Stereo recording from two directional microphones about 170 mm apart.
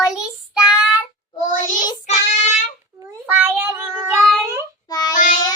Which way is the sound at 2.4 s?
45° left (ahead or behind).